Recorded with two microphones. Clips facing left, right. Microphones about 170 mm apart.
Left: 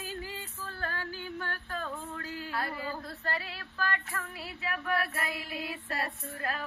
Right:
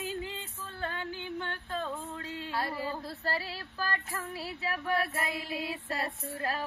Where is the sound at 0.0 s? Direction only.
20° right (ahead or behind).